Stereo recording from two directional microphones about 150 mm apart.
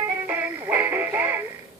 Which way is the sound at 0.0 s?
10° right (ahead or behind).